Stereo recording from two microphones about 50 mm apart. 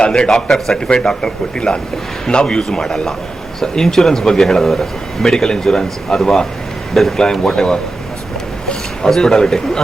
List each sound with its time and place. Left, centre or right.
0.0 s speech: centre
0.3 s speech: centre
9.0 s speech: centre